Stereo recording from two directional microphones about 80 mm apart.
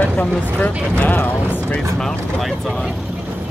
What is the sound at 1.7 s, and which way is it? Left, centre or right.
Speech, centre.